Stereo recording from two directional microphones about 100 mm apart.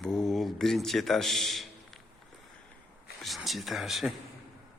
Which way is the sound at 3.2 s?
Centre (ahead or behind).